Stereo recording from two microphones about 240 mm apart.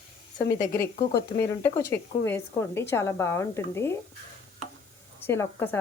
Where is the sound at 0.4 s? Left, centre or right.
Left.